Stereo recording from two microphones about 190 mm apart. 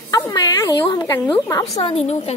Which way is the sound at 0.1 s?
20° left (ahead or behind).